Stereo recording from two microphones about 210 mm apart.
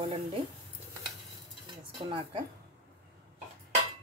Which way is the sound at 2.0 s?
25° right (ahead or behind).